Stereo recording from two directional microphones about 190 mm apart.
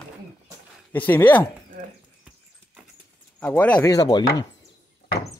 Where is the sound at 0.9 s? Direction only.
10° left (ahead or behind).